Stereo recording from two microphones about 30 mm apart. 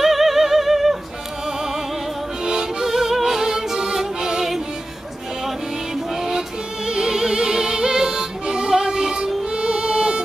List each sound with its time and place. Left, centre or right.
0.0 s music: centre
2.8 s music: centre
6.9 s music: right